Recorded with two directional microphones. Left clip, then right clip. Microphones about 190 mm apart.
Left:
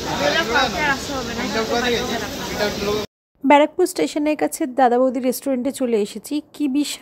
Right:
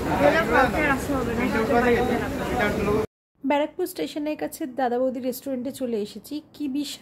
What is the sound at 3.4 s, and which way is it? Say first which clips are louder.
Speech: left 10 dB; 35° left (ahead or behind).